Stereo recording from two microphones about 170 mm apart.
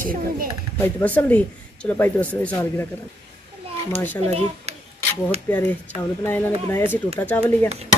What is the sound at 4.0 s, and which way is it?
Speech, 10° left (ahead or behind).